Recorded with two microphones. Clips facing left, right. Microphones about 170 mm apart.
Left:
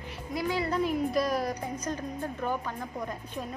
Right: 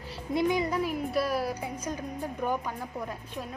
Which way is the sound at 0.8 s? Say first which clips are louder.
Left 2 dB; 5° right (ahead or behind).